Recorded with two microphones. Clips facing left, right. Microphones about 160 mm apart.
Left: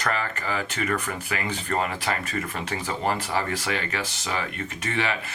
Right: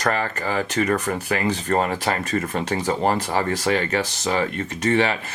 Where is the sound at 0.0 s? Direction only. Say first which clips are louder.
Right 5 dB; 35° right (ahead or behind).